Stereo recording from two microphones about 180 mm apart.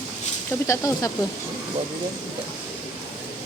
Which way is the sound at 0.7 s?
20° left (ahead or behind).